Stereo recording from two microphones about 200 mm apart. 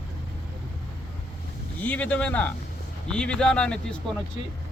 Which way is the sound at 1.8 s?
5° left (ahead or behind).